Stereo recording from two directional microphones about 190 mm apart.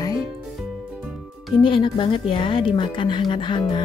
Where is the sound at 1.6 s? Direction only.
25° left (ahead or behind).